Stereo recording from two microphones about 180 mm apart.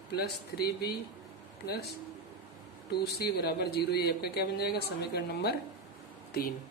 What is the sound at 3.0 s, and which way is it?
Speech, 65° left (ahead or behind).